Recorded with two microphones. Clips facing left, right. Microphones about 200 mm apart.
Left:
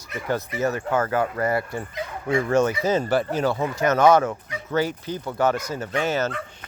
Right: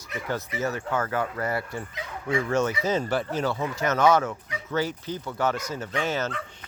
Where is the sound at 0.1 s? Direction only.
50° left (ahead or behind).